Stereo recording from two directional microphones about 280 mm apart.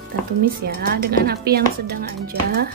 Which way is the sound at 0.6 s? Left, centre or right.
Right.